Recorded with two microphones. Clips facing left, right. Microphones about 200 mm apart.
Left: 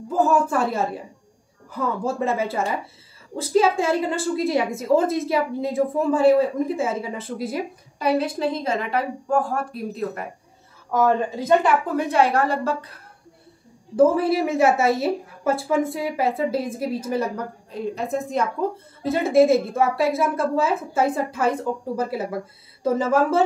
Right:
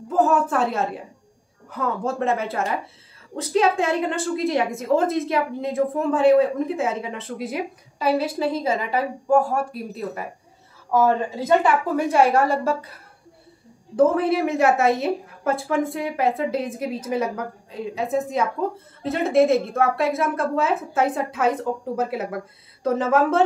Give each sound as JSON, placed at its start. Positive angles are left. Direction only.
{"t": 0.1, "sound": "a woman's voice", "side_deg": 0}
{"t": 12.1, "sound": "a woman's voice", "side_deg": -10}
{"t": 13.9, "sound": "a woman's voice", "side_deg": 0}